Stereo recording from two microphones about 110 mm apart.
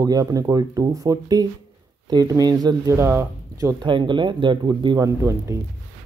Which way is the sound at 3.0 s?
25° right (ahead or behind).